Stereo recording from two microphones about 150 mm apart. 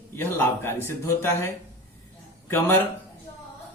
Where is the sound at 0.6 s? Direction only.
15° left (ahead or behind).